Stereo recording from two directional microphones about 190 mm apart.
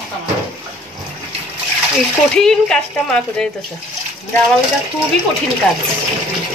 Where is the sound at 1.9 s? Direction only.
5° left (ahead or behind).